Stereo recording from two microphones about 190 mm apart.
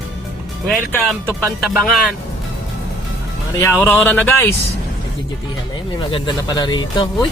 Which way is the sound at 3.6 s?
10° left (ahead or behind).